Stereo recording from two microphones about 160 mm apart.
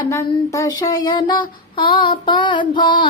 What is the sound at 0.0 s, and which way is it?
Child singing, 20° left (ahead or behind).